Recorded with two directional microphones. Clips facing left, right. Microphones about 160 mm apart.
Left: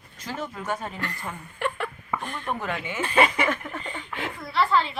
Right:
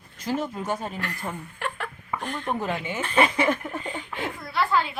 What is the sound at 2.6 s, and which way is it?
Speech, 25° right (ahead or behind).